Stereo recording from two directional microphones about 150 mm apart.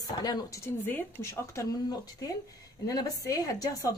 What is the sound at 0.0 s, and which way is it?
Speech, 25° left (ahead or behind).